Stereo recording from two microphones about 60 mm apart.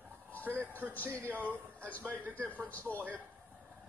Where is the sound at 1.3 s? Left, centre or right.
Left.